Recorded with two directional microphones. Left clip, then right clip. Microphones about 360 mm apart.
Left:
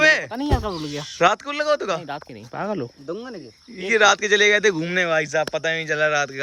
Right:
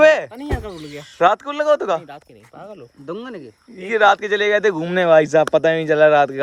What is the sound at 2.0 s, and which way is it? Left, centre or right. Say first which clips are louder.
Speech: left 6 dB; centre.